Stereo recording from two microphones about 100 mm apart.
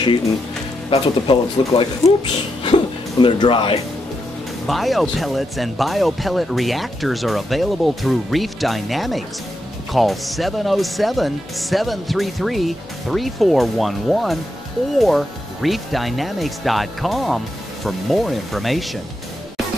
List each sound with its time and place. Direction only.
0.8 s speech: 60° left (ahead or behind)
4.6 s speech: centre (ahead or behind)